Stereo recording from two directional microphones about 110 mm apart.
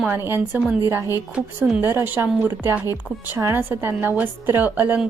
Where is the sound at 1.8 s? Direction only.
20° right (ahead or behind).